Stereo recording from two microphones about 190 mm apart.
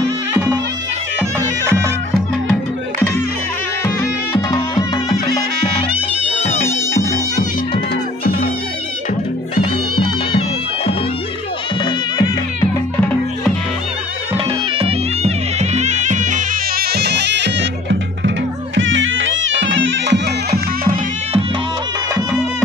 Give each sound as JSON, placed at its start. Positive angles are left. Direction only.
{"t": 0.3, "sound": "music", "side_deg": -10}
{"t": 1.6, "sound": "music", "side_deg": -15}
{"t": 3.8, "sound": "music", "side_deg": 20}
{"t": 6.6, "sound": "music", "side_deg": 15}
{"t": 9.6, "sound": "music", "side_deg": 25}
{"t": 11.8, "sound": "music", "side_deg": 20}
{"t": 14.3, "sound": "music", "side_deg": -30}
{"t": 18.8, "sound": "music", "side_deg": -85}